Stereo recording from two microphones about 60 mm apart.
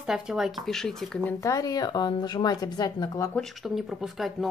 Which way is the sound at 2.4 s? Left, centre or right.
Left.